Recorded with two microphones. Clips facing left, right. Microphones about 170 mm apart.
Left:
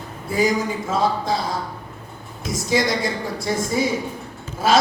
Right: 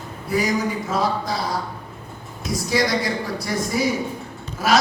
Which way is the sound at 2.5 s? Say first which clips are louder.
Even; 20° left (ahead or behind).